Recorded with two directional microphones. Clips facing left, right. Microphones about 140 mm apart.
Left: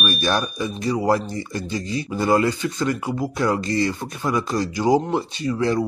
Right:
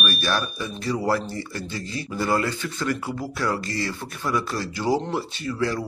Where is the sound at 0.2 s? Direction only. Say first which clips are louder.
Left 4 dB; 20° left (ahead or behind).